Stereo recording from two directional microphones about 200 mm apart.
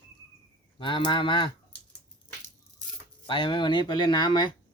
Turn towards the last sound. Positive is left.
turn(degrees=20)  # may be behind; listen again after turning